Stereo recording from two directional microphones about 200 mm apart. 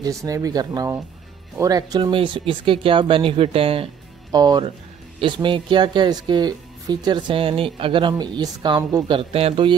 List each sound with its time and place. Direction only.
0.0 s speech: 15° right (ahead or behind)